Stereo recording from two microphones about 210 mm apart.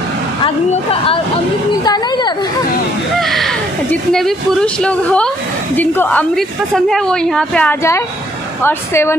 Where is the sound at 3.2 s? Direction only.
Centre (ahead or behind).